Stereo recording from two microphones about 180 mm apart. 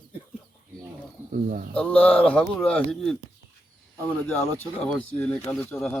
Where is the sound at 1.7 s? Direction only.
5° left (ahead or behind).